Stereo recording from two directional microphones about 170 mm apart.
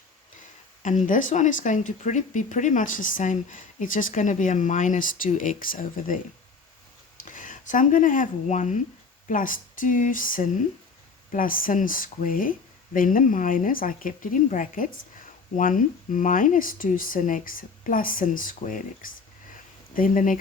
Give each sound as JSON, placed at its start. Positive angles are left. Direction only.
{"t": 1.0, "sound": "speech", "side_deg": 50}
{"t": 7.2, "sound": "speech", "side_deg": 50}